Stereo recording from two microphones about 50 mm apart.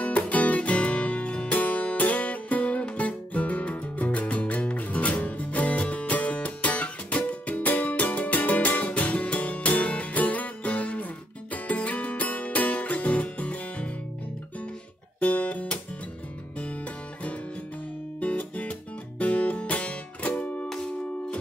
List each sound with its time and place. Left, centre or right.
0.0 s music: left
15.1 s guitar: left
18.2 s music: left
20.6 s music: centre